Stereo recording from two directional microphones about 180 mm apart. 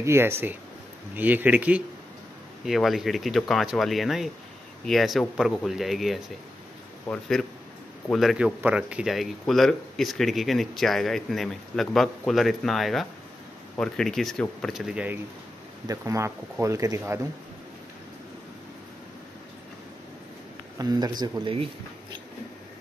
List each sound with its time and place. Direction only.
0.0 s speech: 15° right (ahead or behind)
15.9 s speech: 15° right (ahead or behind)
20.7 s speech: 20° right (ahead or behind)